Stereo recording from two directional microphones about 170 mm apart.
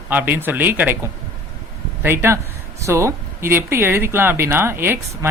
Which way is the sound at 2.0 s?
15° right (ahead or behind).